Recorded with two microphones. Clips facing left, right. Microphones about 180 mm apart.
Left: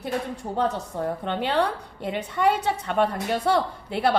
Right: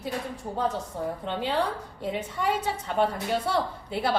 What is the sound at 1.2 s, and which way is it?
A woman's voice, 65° left (ahead or behind).